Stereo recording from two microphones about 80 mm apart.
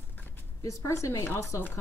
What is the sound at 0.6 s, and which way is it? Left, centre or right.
A woman's voice, left.